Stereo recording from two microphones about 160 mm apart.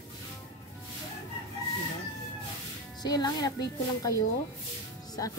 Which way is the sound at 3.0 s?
25° left (ahead or behind).